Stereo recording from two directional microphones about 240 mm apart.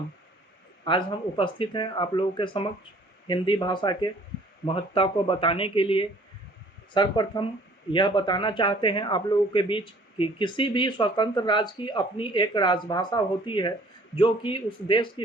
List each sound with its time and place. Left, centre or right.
0.9 s speech: left